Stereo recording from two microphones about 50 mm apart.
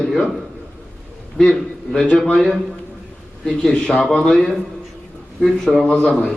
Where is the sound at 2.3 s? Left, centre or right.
Centre.